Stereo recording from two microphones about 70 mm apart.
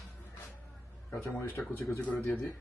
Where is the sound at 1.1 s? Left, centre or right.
Left.